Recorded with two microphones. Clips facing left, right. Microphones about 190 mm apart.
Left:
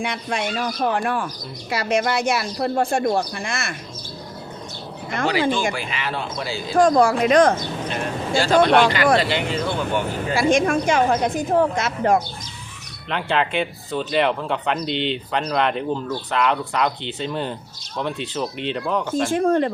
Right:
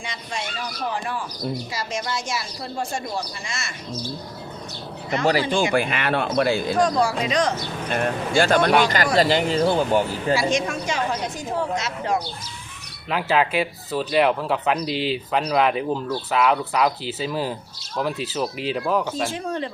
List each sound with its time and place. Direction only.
0.0 s speech: 60° left (ahead or behind)
5.7 s speech: 55° right (ahead or behind)
6.7 s a woman's voice: 50° left (ahead or behind)
7.9 s speech: 55° right (ahead or behind)
8.8 s speech: 45° right (ahead or behind)
10.3 s a woman's voice: 55° left (ahead or behind)
13.1 s speech: 5° right (ahead or behind)
19.3 s a woman's voice: 50° left (ahead or behind)